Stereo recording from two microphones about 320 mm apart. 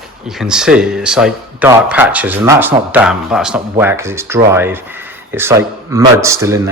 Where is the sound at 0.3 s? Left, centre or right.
Centre.